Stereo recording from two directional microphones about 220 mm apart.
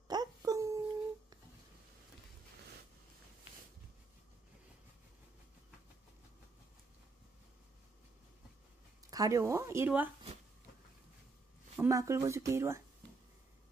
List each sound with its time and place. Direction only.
0.1 s a sound: 15° right (ahead or behind)
9.1 s speech: 15° right (ahead or behind)
11.7 s speech: 15° right (ahead or behind)